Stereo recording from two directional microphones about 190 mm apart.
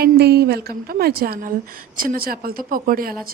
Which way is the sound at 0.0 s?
60° right (ahead or behind).